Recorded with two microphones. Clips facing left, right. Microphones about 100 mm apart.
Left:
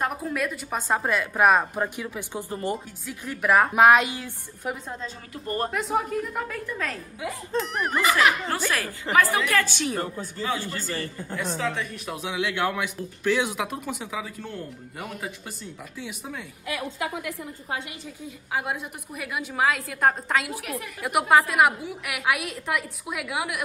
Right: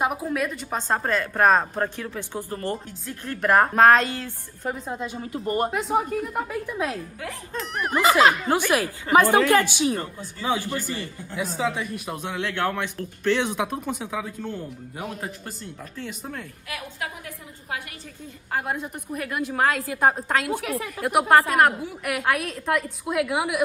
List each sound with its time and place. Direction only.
0.0 s a woman's voice: 5° right (ahead or behind); by 2.8 s 15° left (ahead or behind)
3.1 s a woman's voice: 5° left (ahead or behind)
4.8 s speech: 10° right (ahead or behind)
5.7 s a man's voice: centre (ahead or behind)
6.4 s speech: 15° right (ahead or behind)
7.5 s a man's voice: centre (ahead or behind)
8.0 s speech: 25° right (ahead or behind)
9.8 s a man's voice: centre (ahead or behind)
10.4 s speech: 20° right (ahead or behind)
11.3 s a man's voice: 5° right (ahead or behind)
18.5 s a man's voice: 5° left (ahead or behind)